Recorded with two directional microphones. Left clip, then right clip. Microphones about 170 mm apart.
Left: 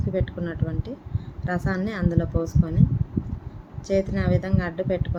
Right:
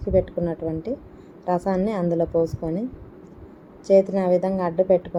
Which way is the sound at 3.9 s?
5° right (ahead or behind).